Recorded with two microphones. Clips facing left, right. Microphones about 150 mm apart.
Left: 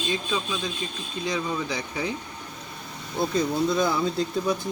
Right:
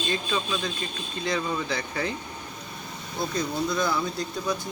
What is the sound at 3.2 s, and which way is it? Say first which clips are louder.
Speech: left 4 dB; 25° left (ahead or behind).